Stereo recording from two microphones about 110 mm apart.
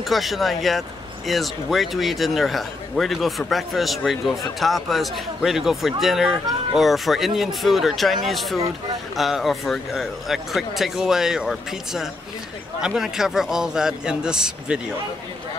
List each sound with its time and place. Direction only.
0.0 s speech: centre (ahead or behind)